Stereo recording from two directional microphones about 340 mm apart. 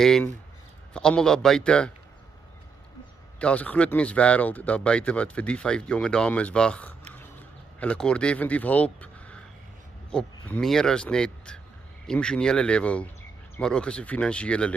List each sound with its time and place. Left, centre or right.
0.0 s speech: centre
3.3 s speech: centre
7.2 s a sound: centre
10.1 s speech: centre